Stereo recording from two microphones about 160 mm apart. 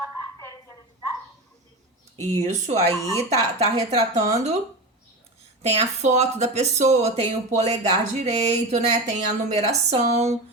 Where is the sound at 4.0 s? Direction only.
45° right (ahead or behind).